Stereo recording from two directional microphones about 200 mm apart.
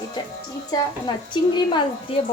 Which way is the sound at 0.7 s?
20° left (ahead or behind).